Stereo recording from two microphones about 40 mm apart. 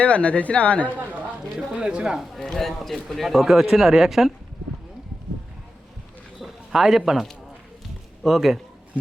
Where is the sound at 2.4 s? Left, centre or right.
Centre.